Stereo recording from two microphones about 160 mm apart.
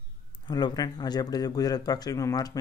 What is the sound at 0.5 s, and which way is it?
Speech, 25° left (ahead or behind).